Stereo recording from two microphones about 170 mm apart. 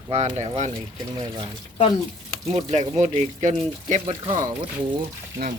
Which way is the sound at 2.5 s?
35° right (ahead or behind).